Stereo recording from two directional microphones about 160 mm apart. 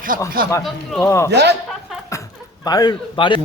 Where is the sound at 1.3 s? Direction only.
90° right.